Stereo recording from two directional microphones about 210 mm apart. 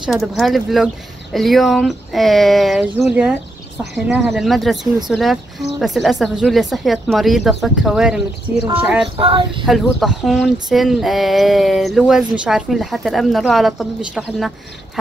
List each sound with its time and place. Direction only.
0.0 s speech: centre (ahead or behind)
9.1 s child singing: 25° right (ahead or behind)
9.7 s speech: centre (ahead or behind)